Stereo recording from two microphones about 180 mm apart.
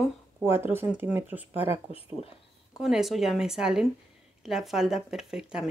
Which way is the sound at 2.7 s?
Centre (ahead or behind).